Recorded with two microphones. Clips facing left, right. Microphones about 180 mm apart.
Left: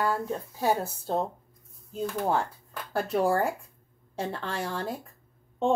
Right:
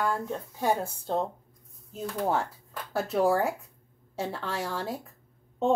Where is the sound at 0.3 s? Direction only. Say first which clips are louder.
Left 1 dB; 5° left (ahead or behind).